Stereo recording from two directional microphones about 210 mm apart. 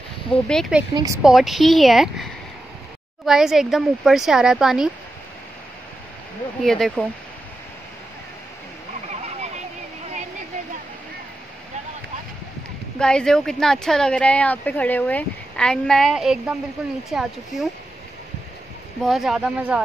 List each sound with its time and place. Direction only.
0.3 s speech: 5° left (ahead or behind)
0.9 s a woman's voice: 15° right (ahead or behind)
1.2 s speech: centre (ahead or behind)
6.6 s speech: centre (ahead or behind)
13.0 s speech: 5° left (ahead or behind)
19.0 s speech: centre (ahead or behind)